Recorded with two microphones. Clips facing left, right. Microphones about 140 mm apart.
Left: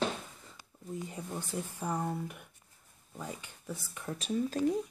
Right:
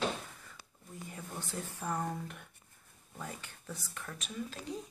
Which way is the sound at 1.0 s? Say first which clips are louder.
Left 4 dB; 15° left (ahead or behind).